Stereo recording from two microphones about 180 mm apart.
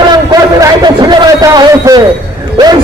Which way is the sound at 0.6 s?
20° right (ahead or behind).